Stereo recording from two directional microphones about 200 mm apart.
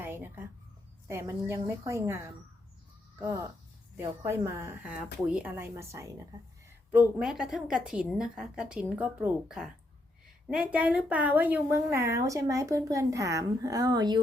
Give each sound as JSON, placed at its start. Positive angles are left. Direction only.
{"t": 0.0, "sound": "a sound", "side_deg": -10}
{"t": 1.0, "sound": "a woman's voice", "side_deg": -15}
{"t": 3.9, "sound": "a woman's voice", "side_deg": -10}